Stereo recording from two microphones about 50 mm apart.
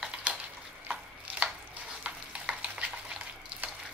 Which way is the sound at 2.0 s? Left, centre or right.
Right.